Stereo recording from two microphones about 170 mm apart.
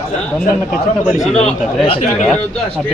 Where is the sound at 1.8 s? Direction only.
35° left (ahead or behind).